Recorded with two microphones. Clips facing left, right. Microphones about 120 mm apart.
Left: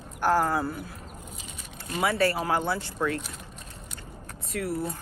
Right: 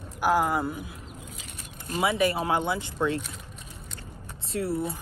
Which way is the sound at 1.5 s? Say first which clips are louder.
Left 1 dB; 45° right (ahead or behind).